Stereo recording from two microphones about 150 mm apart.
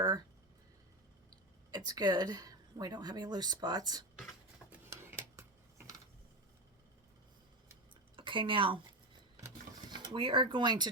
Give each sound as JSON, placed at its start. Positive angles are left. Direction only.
{"t": 1.7, "sound": "speech", "side_deg": -25}
{"t": 4.7, "sound": "a sound", "side_deg": -15}
{"t": 8.1, "sound": "speech", "side_deg": -35}
{"t": 9.9, "sound": "speech", "side_deg": -35}